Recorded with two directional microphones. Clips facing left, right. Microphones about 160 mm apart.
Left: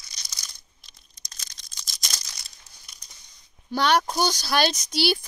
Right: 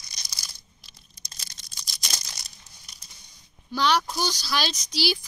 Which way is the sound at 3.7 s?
55° left (ahead or behind).